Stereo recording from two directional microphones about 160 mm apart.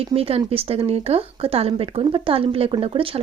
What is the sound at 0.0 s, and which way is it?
A woman's voice, 35° right (ahead or behind).